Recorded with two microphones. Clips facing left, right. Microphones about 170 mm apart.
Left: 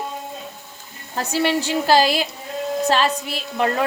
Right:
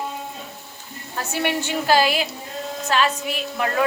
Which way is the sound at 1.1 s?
35° left (ahead or behind).